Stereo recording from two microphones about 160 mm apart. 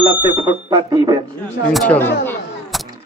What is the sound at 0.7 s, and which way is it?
Speech, 25° right (ahead or behind).